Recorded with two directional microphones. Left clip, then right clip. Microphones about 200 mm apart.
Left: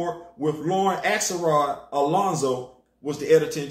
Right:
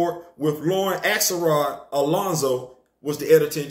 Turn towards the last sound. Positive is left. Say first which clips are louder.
# right 2 dB
turn(degrees=-5)  # may be behind; listen again after turning